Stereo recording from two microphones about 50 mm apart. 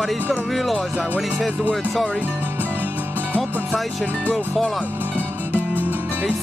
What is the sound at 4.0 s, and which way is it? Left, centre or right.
Speech, left.